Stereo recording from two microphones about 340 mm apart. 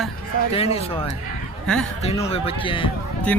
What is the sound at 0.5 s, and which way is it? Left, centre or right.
Speech, centre.